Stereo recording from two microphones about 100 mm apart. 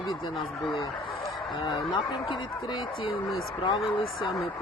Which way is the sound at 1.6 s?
50° left (ahead or behind).